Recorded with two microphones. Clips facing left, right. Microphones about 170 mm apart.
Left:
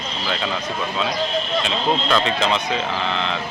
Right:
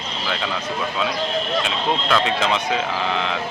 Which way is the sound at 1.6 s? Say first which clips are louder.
Left 1 dB; 5° right (ahead or behind).